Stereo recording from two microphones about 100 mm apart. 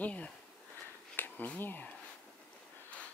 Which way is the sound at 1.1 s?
20° left (ahead or behind).